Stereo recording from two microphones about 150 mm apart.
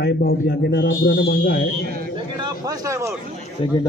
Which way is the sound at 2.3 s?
25° right (ahead or behind).